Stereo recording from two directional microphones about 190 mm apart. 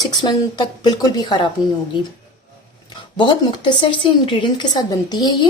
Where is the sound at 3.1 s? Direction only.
25° left (ahead or behind).